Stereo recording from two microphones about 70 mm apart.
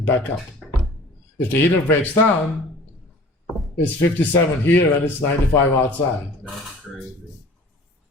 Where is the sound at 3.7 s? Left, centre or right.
Left.